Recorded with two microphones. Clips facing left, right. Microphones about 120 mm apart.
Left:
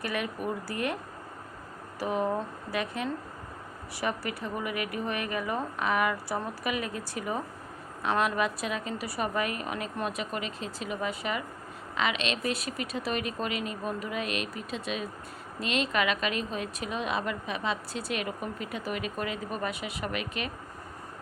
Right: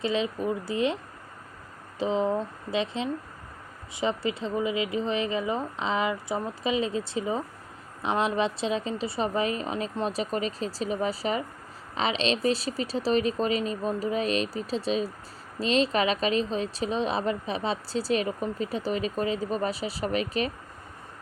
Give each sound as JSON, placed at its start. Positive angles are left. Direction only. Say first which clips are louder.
{"t": 0.0, "sound": "a woman's voice", "louder": "right 5 dB", "side_deg": -20}
{"t": 2.0, "sound": "a woman's voice", "louder": "right 3 dB", "side_deg": -20}